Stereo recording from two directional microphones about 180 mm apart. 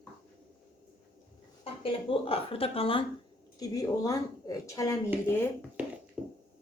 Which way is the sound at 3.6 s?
20° left (ahead or behind).